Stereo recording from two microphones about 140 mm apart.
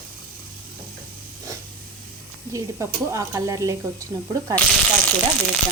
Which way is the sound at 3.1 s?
20° right (ahead or behind).